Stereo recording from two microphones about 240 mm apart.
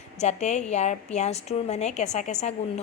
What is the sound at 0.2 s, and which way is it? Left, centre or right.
Speech, left.